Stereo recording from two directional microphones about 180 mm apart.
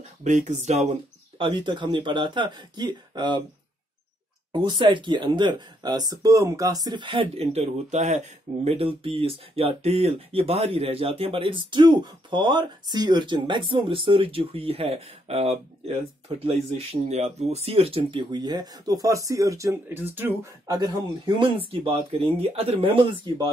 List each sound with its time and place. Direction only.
0.2 s speech: 40° right (ahead or behind)
1.4 s speech: 25° right (ahead or behind)
4.5 s speech: 25° right (ahead or behind)